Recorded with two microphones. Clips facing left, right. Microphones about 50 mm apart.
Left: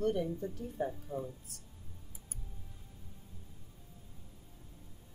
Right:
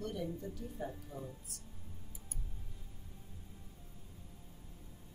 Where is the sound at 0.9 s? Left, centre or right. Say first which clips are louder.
Left 6 dB; centre.